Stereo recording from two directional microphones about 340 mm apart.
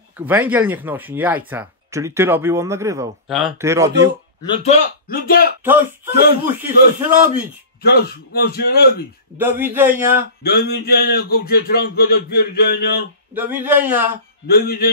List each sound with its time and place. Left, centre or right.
0.3 s speech: centre
4.4 s speech: centre
5.0 s a man's voice: left
5.6 s speech: centre
7.8 s a man's voice: left
9.4 s speech: centre
10.4 s a man's voice: left
13.3 s speech: centre
14.5 s a man's voice: left